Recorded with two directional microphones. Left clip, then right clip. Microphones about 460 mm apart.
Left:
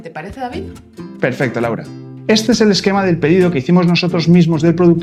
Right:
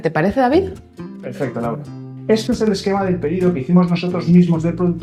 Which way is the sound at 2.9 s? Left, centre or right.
Left.